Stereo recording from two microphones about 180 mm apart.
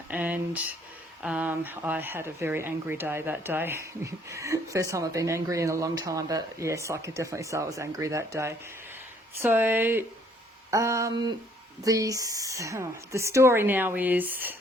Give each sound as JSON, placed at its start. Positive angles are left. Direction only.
{"t": 0.1, "sound": "speech", "side_deg": -5}